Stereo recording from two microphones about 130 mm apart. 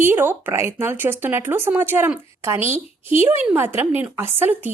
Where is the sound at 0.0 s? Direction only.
15° right (ahead or behind).